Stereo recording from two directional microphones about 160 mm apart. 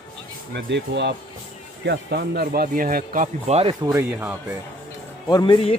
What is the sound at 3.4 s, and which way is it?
Speech, 40° right (ahead or behind).